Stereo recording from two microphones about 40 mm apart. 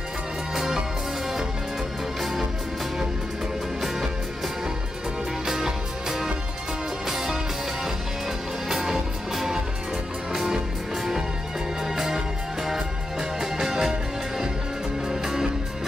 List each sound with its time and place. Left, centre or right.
0.6 s music: centre
5.5 s music: centre
8.6 s music: centre
11.8 s music: centre
15.0 s music: centre